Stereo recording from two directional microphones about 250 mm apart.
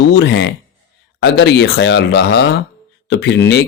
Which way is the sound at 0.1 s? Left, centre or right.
Left.